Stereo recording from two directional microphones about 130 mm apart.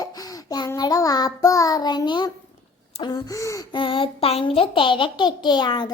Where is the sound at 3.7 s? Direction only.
40° left (ahead or behind).